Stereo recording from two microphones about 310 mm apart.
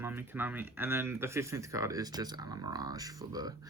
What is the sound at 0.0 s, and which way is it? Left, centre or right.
Speech, centre.